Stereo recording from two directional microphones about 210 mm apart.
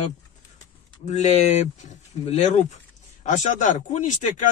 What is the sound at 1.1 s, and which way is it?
Speech, 30° left (ahead or behind).